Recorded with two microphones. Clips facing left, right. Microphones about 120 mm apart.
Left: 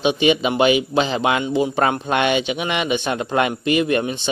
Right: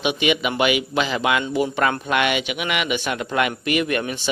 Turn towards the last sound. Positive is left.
turn(degrees=25)  # may be behind; listen again after turning